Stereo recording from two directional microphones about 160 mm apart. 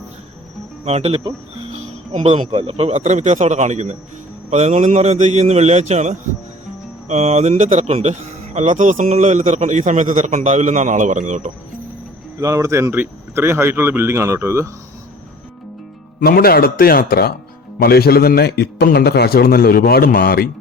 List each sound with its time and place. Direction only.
0.9 s speech: 40° right (ahead or behind)
12.4 s speech: 20° right (ahead or behind)
16.2 s a man's voice: 70° left (ahead or behind)